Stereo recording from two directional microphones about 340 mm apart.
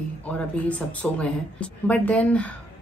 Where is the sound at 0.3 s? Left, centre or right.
Centre.